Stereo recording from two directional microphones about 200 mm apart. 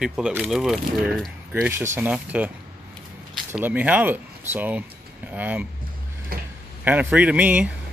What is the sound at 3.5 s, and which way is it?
A man's voice, 10° right (ahead or behind).